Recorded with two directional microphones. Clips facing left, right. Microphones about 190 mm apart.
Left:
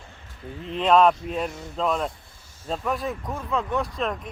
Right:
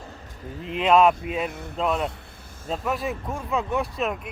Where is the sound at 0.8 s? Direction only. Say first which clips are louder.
Even; 5° right (ahead or behind).